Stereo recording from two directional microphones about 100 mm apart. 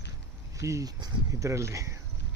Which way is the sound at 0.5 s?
30° right (ahead or behind).